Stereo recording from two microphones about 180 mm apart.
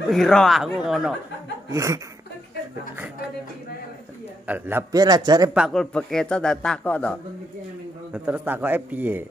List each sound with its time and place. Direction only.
0.1 s a man's voice: 5° left (ahead or behind)
1.7 s a man's voice: 15° right (ahead or behind)
4.5 s a man's voice: 10° right (ahead or behind)
5.5 s a man's voice: centre (ahead or behind)
8.1 s a man's voice: 10° right (ahead or behind)